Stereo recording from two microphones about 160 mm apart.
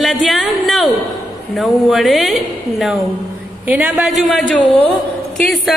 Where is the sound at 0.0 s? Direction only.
Centre (ahead or behind).